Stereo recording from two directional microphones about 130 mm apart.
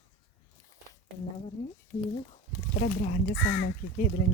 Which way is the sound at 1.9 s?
90° left.